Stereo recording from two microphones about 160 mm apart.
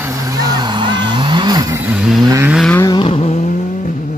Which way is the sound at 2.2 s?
20° right (ahead or behind).